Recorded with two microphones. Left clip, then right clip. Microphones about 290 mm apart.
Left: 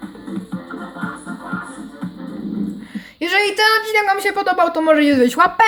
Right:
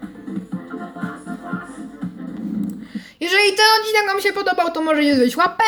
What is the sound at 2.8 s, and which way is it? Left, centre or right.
A woman's voice, centre.